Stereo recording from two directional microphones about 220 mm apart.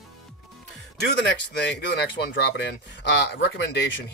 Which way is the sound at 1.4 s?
50° left (ahead or behind).